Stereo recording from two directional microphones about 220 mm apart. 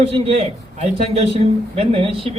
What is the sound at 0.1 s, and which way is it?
A man's voice, 30° right (ahead or behind).